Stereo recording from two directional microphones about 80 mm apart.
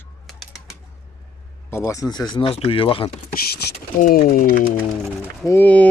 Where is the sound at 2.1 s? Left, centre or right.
Left.